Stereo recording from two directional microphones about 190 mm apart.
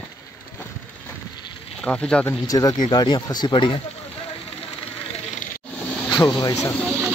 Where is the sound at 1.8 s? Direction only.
5° left (ahead or behind).